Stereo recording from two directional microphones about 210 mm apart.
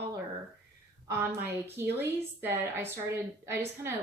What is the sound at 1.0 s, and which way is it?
A woman's voice, 10° right (ahead or behind).